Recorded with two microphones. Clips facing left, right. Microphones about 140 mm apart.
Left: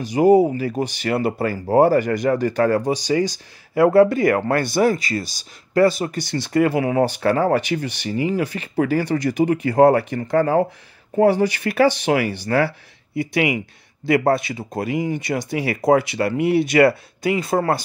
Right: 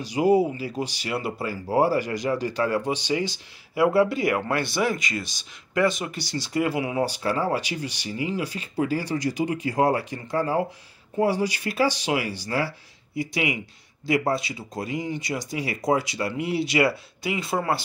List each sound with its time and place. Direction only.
0.0 s speech: 50° left (ahead or behind)
6.2 s speech: 55° left (ahead or behind)